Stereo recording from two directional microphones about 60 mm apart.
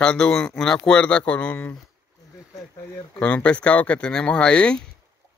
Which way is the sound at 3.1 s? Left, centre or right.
Centre.